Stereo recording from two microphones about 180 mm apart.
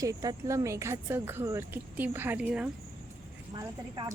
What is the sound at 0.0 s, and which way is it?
Speech, 20° right (ahead or behind).